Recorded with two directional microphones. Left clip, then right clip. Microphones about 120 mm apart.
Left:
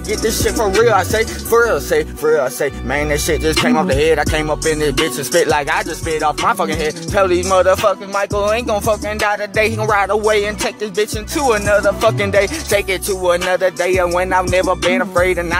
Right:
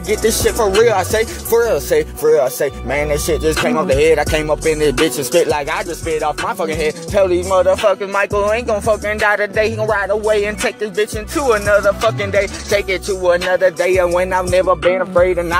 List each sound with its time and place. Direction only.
0.1 s speech: 5° right (ahead or behind)
0.7 s speech: 5° left (ahead or behind)
5.3 s speech: 10° left (ahead or behind)
6.7 s speech: centre (ahead or behind)
7.4 s music: 30° left (ahead or behind)
7.9 s speech: centre (ahead or behind)
11.8 s music: 30° left (ahead or behind)
12.4 s speech: 20° left (ahead or behind)
13.7 s speech: centre (ahead or behind)